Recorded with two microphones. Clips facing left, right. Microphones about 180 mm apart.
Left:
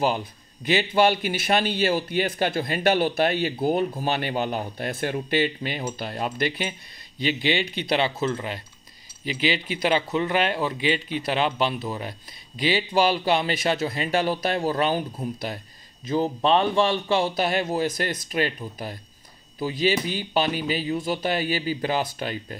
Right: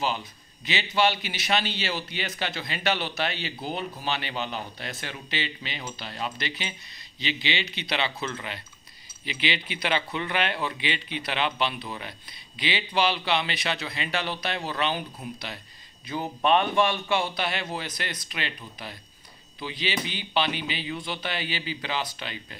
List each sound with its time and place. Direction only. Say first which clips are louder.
0.0 s speech: left 5 dB; 50° left (ahead or behind)
16.4 s speech: left 1 dB; 30° left (ahead or behind)
19.6 s speech: left 8 dB; 45° left (ahead or behind)